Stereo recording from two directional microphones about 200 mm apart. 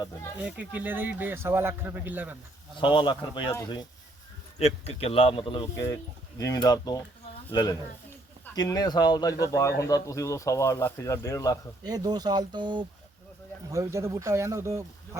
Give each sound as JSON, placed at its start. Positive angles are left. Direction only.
{"t": 0.3, "sound": "speech", "side_deg": -5}
{"t": 2.8, "sound": "speech", "side_deg": 25}
{"t": 4.5, "sound": "speech", "side_deg": 30}
{"t": 5.6, "sound": "speech", "side_deg": 15}
{"t": 11.8, "sound": "speech", "side_deg": -20}